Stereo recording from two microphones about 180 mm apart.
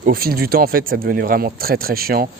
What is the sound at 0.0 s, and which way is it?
Speech, 55° right (ahead or behind).